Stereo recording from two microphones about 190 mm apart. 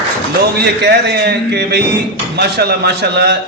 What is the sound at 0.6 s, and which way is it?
A man's voice, 60° right (ahead or behind).